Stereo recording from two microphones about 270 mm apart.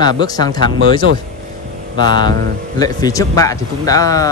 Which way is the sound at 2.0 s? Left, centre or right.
Centre.